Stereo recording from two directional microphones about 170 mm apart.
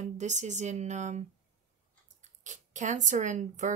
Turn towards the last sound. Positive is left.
turn(degrees=-45)  # may be behind; listen again after turning